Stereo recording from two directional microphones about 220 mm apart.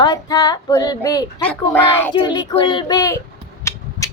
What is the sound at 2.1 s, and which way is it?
A child's voice, 20° left (ahead or behind).